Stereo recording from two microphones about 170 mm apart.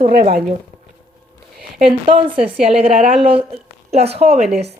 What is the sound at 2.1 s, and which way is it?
Speech, 30° right (ahead or behind).